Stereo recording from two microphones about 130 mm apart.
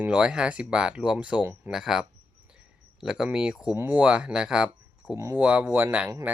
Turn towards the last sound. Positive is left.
turn(degrees=-15)  # may be behind; listen again after turning